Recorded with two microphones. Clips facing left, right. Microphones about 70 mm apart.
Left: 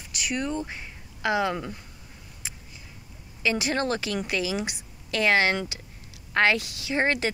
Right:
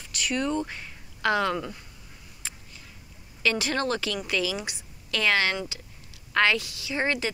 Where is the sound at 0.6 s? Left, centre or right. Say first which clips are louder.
Left 1 dB; centre.